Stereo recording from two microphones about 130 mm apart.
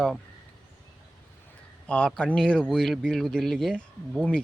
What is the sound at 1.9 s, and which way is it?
Speech, 5° left (ahead or behind).